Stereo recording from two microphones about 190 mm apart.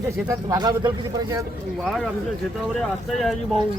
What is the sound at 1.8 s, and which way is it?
A man's voice, centre (ahead or behind).